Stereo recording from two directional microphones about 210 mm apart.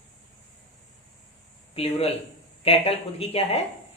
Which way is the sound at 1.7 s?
30° left (ahead or behind).